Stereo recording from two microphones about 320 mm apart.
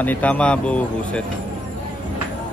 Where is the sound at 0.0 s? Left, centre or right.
Centre.